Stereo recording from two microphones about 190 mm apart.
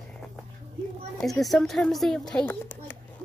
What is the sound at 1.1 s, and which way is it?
Speech, centre (ahead or behind).